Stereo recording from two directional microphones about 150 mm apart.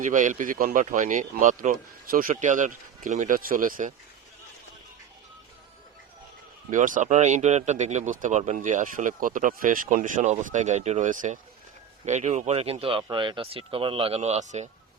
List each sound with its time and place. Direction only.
0.0 s speech: 60° right (ahead or behind)
6.7 s speech: 60° right (ahead or behind)